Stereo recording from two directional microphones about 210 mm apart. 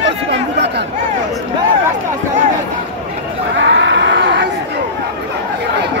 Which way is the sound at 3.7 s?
55° right (ahead or behind).